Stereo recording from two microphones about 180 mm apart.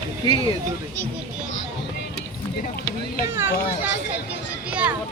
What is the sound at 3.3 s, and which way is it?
Speech, 15° right (ahead or behind).